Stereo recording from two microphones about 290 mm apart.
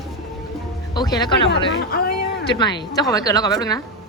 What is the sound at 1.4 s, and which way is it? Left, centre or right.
Speech, left.